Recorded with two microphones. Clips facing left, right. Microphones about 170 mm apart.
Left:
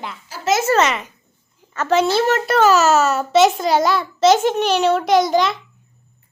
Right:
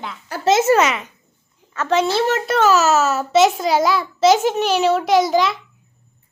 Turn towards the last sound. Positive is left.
turn(degrees=-5)  # may be behind; listen again after turning